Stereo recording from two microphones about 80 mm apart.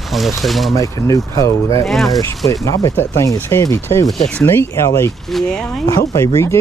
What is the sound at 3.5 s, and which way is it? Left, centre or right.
Speech, left.